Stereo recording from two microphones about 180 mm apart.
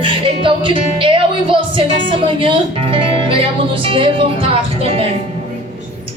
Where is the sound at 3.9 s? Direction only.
30° right (ahead or behind).